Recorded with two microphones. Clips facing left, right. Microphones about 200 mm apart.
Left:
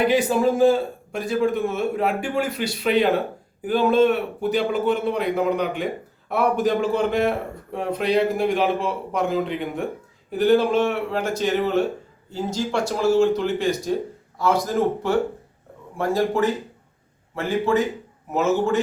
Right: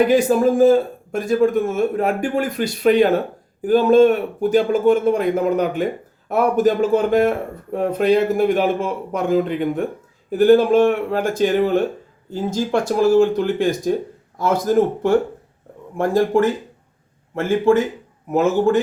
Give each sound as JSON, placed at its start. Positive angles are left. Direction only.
{"t": 0.1, "sound": "a man's voice", "side_deg": -45}
{"t": 16.0, "sound": "a man's voice", "side_deg": -50}